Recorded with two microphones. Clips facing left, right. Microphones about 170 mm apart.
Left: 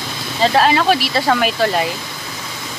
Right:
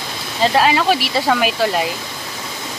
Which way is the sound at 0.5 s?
5° right (ahead or behind).